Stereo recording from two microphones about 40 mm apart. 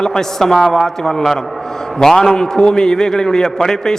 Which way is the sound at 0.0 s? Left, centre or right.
Centre.